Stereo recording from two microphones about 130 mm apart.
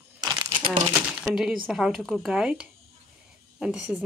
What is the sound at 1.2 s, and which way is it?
Speech, 5° right (ahead or behind).